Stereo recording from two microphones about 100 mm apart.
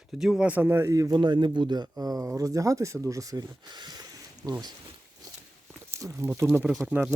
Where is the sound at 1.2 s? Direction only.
50° right (ahead or behind).